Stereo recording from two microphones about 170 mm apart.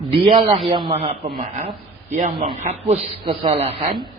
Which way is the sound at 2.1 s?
45° right (ahead or behind).